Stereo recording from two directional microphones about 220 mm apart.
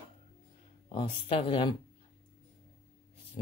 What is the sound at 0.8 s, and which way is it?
Cutlery, 25° left (ahead or behind).